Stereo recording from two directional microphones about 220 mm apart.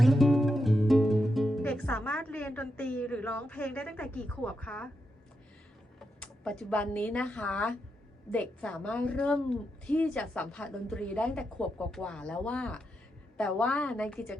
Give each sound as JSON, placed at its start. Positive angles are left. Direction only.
{"t": 0.0, "sound": "music", "side_deg": 0}
{"t": 6.1, "sound": "a woman's voice", "side_deg": 5}